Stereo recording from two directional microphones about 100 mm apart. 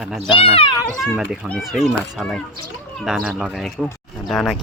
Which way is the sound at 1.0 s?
5° right (ahead or behind).